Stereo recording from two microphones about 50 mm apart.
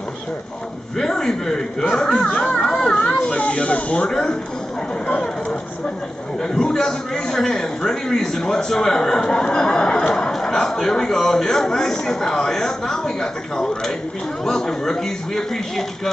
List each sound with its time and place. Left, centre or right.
0.9 s a man's voice: centre
2.3 s a sound: centre
4.1 s a man's voice: centre
6.4 s a man's voice: centre